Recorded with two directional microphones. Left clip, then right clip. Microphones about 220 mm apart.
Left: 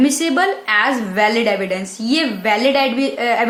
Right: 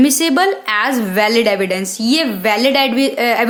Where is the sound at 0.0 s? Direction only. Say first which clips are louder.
Right 3 dB; 50° right (ahead or behind).